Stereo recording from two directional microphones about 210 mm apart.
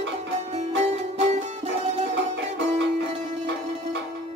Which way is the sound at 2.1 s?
55° right (ahead or behind).